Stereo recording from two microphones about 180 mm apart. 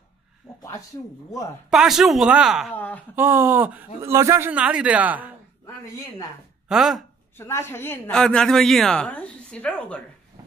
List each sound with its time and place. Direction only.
0.6 s a sound: 20° left (ahead or behind)
1.7 s speech: centre (ahead or behind)
2.7 s speech: 10° left (ahead or behind)
3.2 s speech: 15° right (ahead or behind)
6.7 s speech: centre (ahead or behind)
7.3 s speech: 15° left (ahead or behind)